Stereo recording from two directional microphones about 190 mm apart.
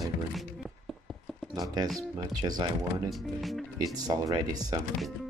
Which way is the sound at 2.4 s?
20° right (ahead or behind).